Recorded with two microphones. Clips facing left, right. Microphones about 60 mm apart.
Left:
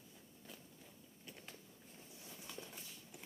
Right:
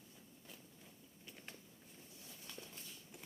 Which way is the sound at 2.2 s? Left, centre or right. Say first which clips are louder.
Left 3 dB; centre.